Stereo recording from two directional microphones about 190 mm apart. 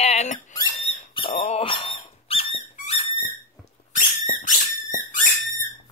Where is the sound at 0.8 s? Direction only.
35° left (ahead or behind).